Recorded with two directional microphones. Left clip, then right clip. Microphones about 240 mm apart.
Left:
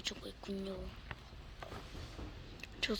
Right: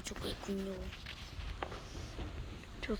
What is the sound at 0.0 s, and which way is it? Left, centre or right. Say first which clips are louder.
Speech: right 1 dB; centre.